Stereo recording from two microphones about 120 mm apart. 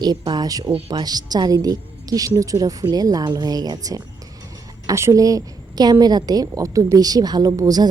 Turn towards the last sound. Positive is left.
turn(degrees=-30)  # may be behind; listen again after turning